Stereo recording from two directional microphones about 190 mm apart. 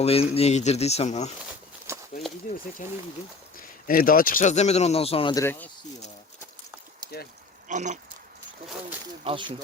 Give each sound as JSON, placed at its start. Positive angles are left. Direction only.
{"t": 0.0, "sound": "speech", "side_deg": 30}
{"t": 1.9, "sound": "a sound", "side_deg": -15}
{"t": 2.8, "sound": "speech", "side_deg": 40}
{"t": 5.3, "sound": "speech", "side_deg": 15}
{"t": 7.7, "sound": "speech", "side_deg": -40}
{"t": 9.2, "sound": "speech", "side_deg": -25}